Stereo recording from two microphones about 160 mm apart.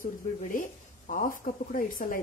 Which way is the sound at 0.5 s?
55° left (ahead or behind).